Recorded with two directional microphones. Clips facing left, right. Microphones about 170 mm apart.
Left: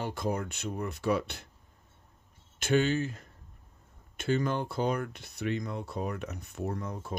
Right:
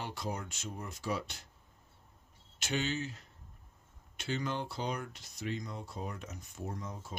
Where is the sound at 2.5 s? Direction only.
55° left (ahead or behind).